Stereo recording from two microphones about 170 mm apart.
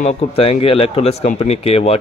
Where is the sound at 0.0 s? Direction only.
35° left (ahead or behind).